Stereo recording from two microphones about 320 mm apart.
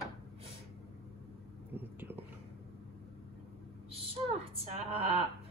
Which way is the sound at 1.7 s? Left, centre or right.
Centre.